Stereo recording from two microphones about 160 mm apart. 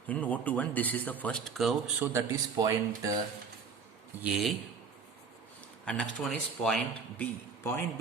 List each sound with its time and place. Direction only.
0.1 s a man's voice: 10° left (ahead or behind)
2.1 s speech: 20° right (ahead or behind)
4.2 s speech: 5° right (ahead or behind)
5.8 s speech: 5° left (ahead or behind)
7.6 s a man's voice: 15° left (ahead or behind)